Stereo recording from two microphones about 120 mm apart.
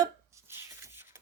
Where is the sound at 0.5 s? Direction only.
25° right (ahead or behind).